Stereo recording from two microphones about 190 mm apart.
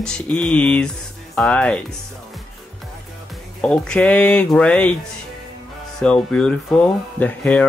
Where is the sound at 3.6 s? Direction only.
5° left (ahead or behind).